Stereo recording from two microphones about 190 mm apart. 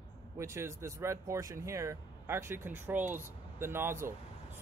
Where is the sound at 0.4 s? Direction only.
15° right (ahead or behind).